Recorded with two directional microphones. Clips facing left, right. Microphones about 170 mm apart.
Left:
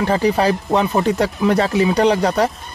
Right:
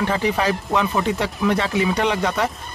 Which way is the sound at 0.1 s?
35° left (ahead or behind).